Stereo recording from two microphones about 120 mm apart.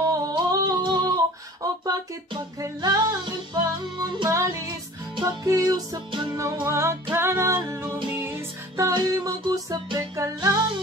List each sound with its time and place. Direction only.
0.1 s singing: 30° right (ahead or behind)
1.6 s music: 30° right (ahead or behind)